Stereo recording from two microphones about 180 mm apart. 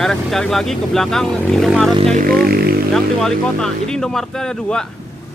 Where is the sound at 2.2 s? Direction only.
60° right (ahead or behind).